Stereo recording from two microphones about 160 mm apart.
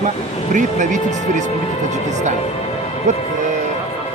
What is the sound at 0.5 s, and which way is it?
Speech, 50° right (ahead or behind).